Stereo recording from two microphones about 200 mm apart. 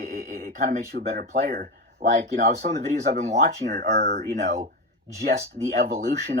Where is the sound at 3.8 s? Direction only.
50° right (ahead or behind).